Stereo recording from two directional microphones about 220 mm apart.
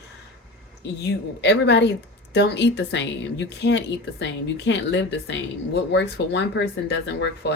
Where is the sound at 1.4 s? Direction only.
50° left (ahead or behind).